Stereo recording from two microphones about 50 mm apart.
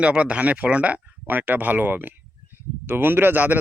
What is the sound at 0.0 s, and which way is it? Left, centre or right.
Speech, right.